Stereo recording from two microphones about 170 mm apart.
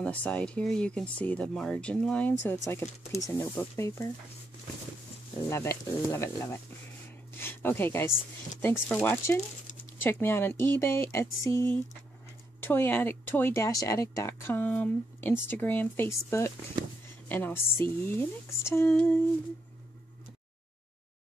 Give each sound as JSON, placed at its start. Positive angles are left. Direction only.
{"t": 0.0, "sound": "speech", "side_deg": 10}
{"t": 5.5, "sound": "speech", "side_deg": 15}
{"t": 7.3, "sound": "a sound", "side_deg": 15}
{"t": 8.5, "sound": "speech", "side_deg": 15}